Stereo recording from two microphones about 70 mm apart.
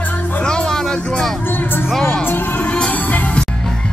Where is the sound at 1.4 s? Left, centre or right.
Left.